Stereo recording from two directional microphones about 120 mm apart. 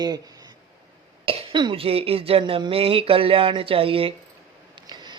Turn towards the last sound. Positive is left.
turn(degrees=-50)  # may be behind; listen again after turning